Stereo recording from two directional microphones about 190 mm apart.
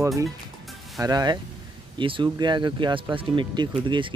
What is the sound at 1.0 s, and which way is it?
Speech, 20° right (ahead or behind).